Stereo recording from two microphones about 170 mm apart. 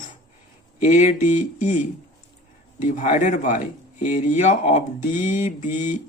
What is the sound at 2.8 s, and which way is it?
Speech, 45° left (ahead or behind).